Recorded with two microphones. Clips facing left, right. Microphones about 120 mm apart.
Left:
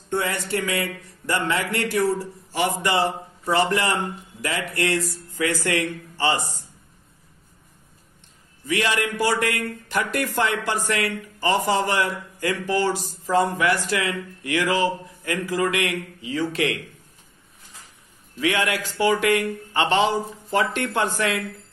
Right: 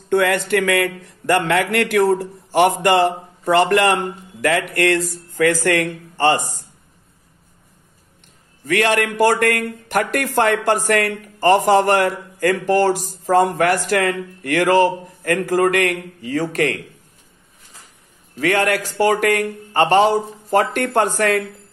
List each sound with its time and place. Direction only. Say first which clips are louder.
0.1 s a sound: right 9 dB; 80° right
0.5 s a man's voice: right 8 dB; 75° right (ahead or behind); by 6.4 s 55° right (ahead or behind)
8.6 s a man's voice: right 6 dB; 60° right (ahead or behind)
18.4 s speech: right 5 dB; 45° right (ahead or behind)